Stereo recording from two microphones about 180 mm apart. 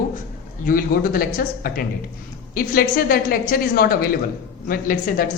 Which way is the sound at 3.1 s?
55° left (ahead or behind).